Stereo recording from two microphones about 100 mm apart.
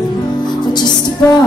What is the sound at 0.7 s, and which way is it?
Music, 45° left (ahead or behind).